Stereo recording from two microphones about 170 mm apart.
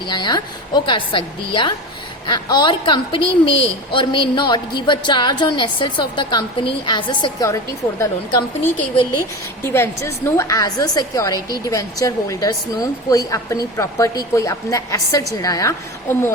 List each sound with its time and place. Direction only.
0.1 s a woman's voice: 25° left (ahead or behind)
9.7 s a woman's voice: 15° left (ahead or behind)